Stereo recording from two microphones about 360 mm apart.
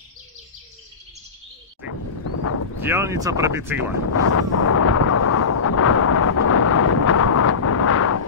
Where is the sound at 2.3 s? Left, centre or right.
Left.